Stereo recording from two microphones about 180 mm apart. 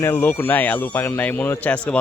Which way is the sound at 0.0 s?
10° left (ahead or behind).